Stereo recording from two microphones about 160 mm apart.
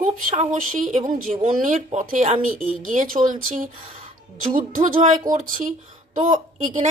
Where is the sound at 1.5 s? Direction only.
50° right (ahead or behind).